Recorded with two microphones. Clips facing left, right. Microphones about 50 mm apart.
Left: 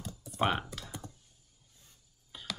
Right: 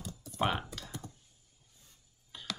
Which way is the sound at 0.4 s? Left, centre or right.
Centre.